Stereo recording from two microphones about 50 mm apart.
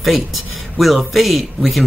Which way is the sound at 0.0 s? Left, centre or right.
Centre.